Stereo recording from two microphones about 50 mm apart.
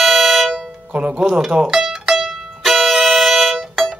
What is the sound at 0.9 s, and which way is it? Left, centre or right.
Speech, right.